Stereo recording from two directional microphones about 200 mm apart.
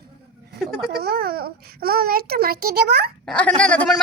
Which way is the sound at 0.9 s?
50° right (ahead or behind).